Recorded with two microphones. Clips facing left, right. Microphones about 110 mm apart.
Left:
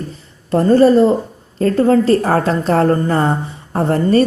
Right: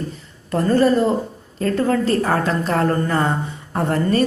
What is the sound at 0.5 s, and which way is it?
A woman's voice, 30° left (ahead or behind).